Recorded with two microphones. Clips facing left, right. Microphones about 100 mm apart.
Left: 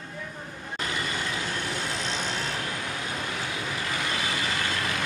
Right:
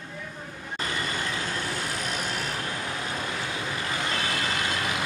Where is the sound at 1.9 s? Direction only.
25° left (ahead or behind).